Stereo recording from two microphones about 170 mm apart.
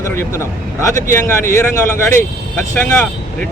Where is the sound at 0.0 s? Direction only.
15° left (ahead or behind).